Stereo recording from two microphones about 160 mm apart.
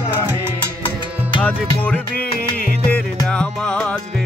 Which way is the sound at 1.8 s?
10° left (ahead or behind).